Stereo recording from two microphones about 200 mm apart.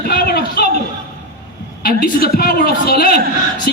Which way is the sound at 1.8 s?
50° left (ahead or behind).